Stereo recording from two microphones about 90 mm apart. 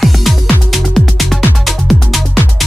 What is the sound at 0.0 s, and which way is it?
Music, centre (ahead or behind).